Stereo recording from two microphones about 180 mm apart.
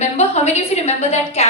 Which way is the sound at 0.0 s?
35° left (ahead or behind).